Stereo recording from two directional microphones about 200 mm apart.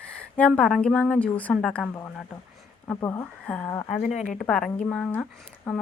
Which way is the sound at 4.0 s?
40° left (ahead or behind).